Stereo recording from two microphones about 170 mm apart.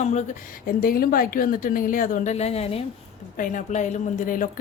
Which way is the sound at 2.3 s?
40° left (ahead or behind).